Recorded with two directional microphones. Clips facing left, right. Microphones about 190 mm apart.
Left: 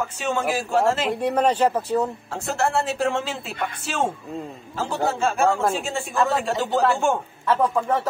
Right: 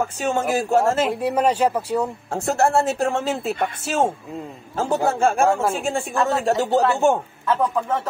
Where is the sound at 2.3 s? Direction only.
45° right (ahead or behind).